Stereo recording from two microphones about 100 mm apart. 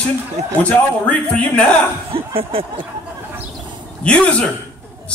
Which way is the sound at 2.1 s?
70° right (ahead or behind).